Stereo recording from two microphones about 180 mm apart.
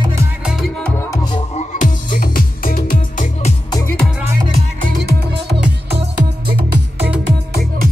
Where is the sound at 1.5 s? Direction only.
45° left (ahead or behind).